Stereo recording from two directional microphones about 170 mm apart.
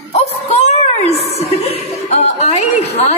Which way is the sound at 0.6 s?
40° left (ahead or behind).